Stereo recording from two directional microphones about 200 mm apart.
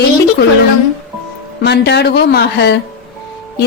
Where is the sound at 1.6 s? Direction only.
55° left (ahead or behind).